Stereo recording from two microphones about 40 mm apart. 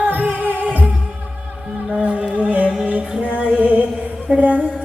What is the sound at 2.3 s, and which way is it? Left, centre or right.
Music, right.